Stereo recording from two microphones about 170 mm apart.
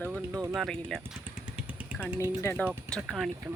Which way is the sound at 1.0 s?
10° right (ahead or behind).